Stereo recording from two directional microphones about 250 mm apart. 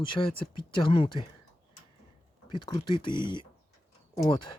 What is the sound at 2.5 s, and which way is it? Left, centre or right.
Speech, centre.